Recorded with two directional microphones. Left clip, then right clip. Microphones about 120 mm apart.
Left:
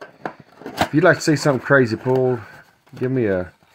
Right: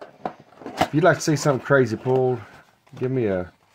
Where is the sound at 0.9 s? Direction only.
45° left (ahead or behind).